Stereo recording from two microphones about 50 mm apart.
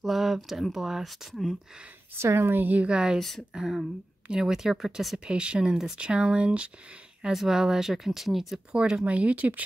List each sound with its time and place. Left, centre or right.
0.0 s speech: centre
2.1 s speech: right
2.6 s a woman's voice: right
2.9 s speech: centre
3.2 s speech: centre
3.5 s speech: centre
7.3 s speech: centre
8.7 s speech: right